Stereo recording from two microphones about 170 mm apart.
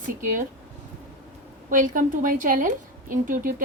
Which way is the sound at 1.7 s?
50° right (ahead or behind).